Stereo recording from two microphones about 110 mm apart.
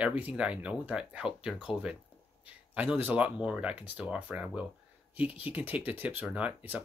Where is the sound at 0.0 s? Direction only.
10° right (ahead or behind).